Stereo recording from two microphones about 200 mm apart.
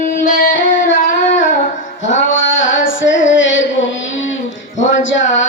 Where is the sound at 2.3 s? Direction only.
70° left (ahead or behind).